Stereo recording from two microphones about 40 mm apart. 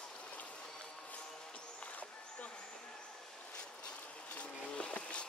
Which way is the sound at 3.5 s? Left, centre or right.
Left.